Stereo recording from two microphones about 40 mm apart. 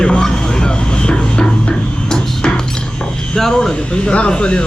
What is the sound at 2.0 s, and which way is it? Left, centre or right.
Music, centre.